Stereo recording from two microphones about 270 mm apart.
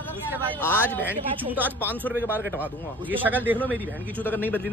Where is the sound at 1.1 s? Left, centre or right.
Centre.